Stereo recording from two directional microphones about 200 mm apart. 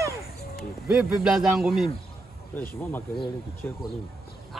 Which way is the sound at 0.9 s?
5° right (ahead or behind).